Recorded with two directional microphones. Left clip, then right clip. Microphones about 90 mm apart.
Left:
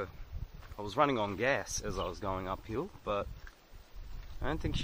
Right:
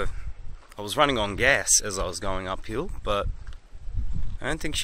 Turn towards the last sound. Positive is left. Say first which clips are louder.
# right 8 dB
turn(degrees=-20)  # may be behind; listen again after turning